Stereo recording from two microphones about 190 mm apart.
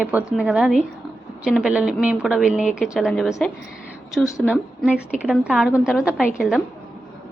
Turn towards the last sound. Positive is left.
turn(degrees=-5)  # may be behind; listen again after turning